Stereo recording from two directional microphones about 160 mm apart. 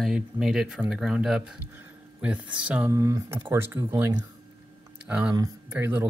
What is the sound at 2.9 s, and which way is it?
Speech, 20° right (ahead or behind).